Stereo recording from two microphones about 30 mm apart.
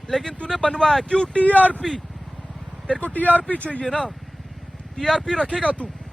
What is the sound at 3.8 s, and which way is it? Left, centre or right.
Speech, left.